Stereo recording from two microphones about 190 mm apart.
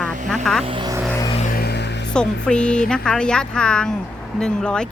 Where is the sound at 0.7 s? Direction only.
25° right (ahead or behind).